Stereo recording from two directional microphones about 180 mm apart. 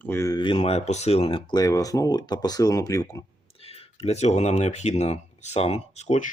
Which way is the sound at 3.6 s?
35° left (ahead or behind).